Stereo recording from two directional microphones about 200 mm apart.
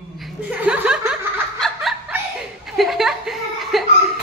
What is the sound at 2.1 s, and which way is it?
Chuckle, 5° right (ahead or behind).